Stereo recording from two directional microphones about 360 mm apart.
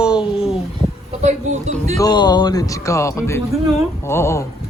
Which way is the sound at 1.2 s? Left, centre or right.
Centre.